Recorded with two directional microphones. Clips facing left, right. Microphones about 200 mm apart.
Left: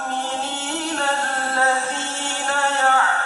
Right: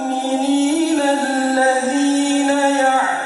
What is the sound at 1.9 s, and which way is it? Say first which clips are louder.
Music: right 15 dB; 5° right (ahead or behind).